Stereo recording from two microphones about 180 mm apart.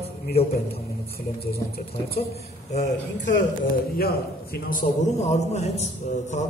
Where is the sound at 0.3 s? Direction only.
35° left (ahead or behind).